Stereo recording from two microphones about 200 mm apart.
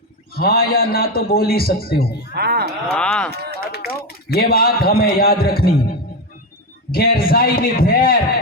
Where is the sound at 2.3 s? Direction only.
55° right (ahead or behind).